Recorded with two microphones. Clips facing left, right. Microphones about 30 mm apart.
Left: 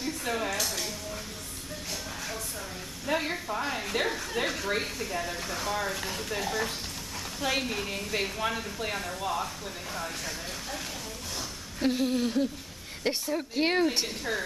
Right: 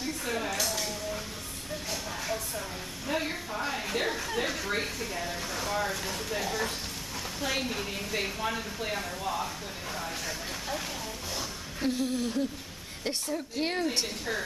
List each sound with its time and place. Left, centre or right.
0.2 s music: centre
3.1 s a sound: centre
4.4 s speech: centre
11.8 s speech: left
13.8 s a woman's voice: centre